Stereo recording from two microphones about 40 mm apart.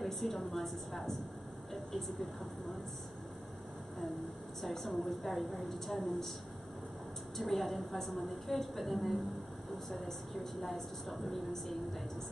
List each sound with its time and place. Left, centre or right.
0.0 s a woman's voice: centre
4.6 s a woman's voice: centre
7.3 s a woman's voice: centre